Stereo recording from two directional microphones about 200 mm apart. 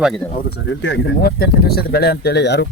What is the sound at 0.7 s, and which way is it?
Speech, 65° left (ahead or behind).